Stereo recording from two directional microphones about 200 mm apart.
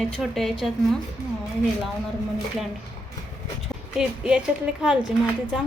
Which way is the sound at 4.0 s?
5° right (ahead or behind).